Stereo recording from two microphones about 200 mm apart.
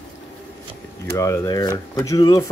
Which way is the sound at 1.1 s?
15° left (ahead or behind).